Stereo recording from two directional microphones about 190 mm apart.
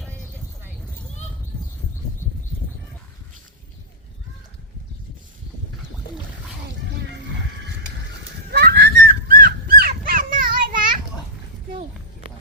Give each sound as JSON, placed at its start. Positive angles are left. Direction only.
{"t": 8.4, "sound": "dog", "side_deg": -55}